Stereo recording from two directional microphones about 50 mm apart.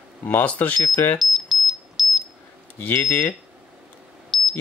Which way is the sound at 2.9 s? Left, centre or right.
Left.